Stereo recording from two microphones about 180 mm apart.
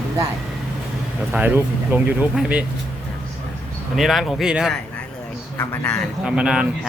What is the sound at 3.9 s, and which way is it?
Speech, centre (ahead or behind).